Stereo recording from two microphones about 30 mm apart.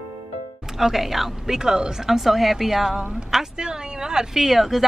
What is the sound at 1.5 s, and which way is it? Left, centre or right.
Speech, right.